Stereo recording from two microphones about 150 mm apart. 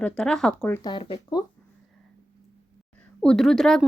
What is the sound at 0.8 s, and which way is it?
Speech, 35° left (ahead or behind).